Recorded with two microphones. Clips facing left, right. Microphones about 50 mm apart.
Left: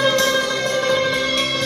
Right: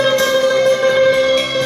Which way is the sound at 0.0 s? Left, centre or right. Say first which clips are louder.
Right 4 dB; centre.